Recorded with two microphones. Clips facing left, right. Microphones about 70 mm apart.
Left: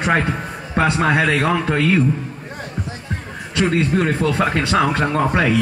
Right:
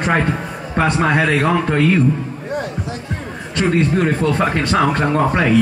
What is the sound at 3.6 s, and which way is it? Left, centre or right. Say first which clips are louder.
A man's voice: right 1 dB; centre.